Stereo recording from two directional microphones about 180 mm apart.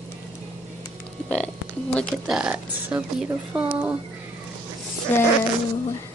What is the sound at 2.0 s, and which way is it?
A woman's voice, centre (ahead or behind).